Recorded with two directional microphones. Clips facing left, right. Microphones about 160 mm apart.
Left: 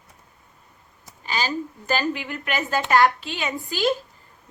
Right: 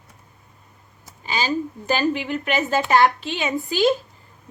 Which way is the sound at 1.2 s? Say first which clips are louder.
Right 3 dB; 20° right (ahead or behind).